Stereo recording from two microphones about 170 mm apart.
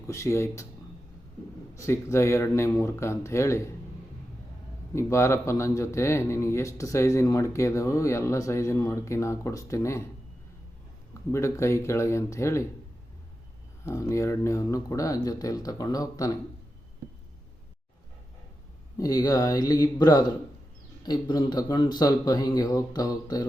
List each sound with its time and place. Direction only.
0.1 s a man's voice: 15° left (ahead or behind)
1.7 s a man's voice: 15° left (ahead or behind)
4.9 s a man's voice: 15° left (ahead or behind)
11.3 s a man's voice: 15° left (ahead or behind)
13.8 s speech: 15° left (ahead or behind)
18.9 s speech: 20° left (ahead or behind)